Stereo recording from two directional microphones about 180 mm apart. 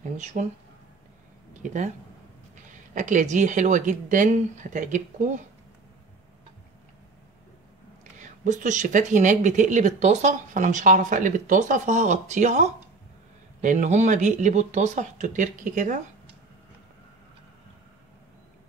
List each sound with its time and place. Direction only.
0.2 s speech: 40° right (ahead or behind)
1.6 s speech: 40° right (ahead or behind)
8.2 s speech: 45° right (ahead or behind)